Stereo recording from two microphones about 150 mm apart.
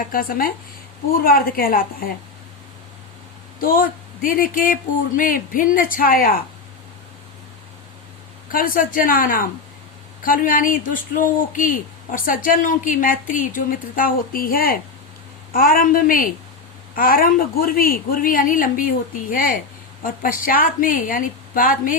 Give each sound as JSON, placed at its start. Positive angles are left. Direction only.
{"t": 0.1, "sound": "speech", "side_deg": 75}
{"t": 3.6, "sound": "speech", "side_deg": 70}
{"t": 8.5, "sound": "speech", "side_deg": 65}